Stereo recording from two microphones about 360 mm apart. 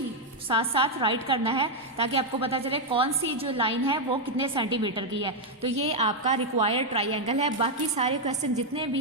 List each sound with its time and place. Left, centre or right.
0.4 s a woman's voice: centre